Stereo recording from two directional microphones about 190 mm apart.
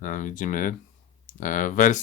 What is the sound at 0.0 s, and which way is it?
Speech, 45° left (ahead or behind).